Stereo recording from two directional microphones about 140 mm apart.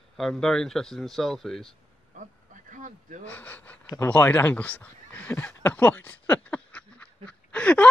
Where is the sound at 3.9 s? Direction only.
15° left (ahead or behind).